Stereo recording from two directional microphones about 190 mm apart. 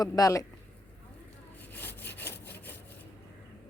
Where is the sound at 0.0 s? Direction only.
20° left (ahead or behind).